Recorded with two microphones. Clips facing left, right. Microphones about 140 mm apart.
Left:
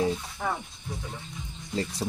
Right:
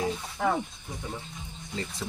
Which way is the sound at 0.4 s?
75° right (ahead or behind).